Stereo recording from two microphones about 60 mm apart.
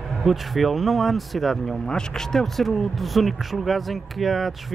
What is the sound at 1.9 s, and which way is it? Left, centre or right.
Speech, centre.